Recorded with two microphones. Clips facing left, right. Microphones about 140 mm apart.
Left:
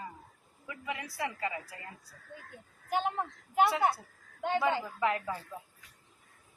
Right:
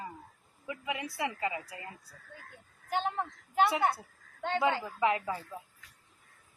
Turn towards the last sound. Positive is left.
turn(degrees=-5)  # may be behind; listen again after turning